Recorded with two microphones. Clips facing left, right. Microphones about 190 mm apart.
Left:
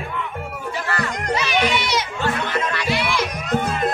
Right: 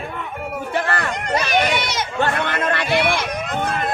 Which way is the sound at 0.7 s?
55° right (ahead or behind).